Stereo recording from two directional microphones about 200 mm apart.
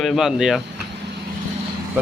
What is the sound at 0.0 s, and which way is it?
Speech, centre (ahead or behind).